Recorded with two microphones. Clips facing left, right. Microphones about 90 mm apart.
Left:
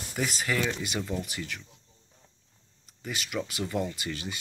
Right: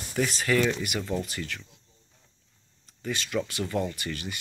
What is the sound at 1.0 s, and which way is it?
Speech, 10° left (ahead or behind).